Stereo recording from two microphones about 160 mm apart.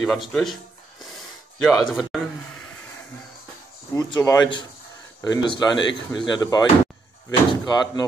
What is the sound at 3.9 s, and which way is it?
Speech, 25° left (ahead or behind).